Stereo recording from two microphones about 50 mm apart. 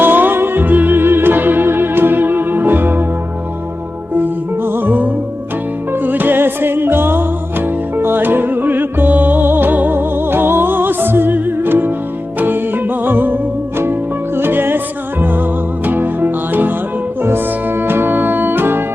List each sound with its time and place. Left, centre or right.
0.0 s music: right
4.1 s music: right